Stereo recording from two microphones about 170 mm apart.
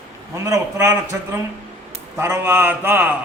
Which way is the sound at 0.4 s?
15° right (ahead or behind).